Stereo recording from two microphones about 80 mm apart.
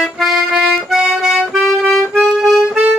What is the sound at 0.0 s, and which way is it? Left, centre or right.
Accordion, centre.